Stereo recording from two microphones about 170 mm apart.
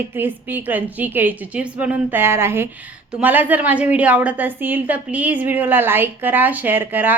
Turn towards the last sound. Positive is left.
turn(degrees=-10)  # may be behind; listen again after turning